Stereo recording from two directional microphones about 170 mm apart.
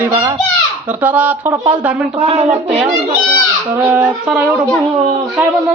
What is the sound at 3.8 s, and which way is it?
Speech, 10° right (ahead or behind).